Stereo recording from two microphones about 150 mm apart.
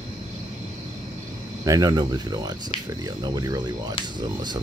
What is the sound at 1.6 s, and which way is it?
Speech, 25° right (ahead or behind).